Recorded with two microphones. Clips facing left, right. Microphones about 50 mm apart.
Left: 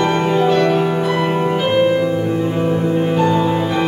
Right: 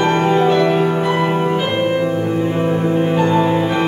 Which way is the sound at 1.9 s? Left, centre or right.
Centre.